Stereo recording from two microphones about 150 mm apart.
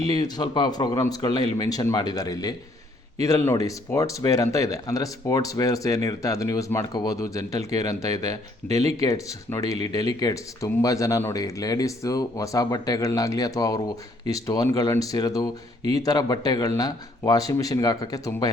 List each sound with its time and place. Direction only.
0.0 s speech: 25° left (ahead or behind)
8.6 s speech: 10° left (ahead or behind)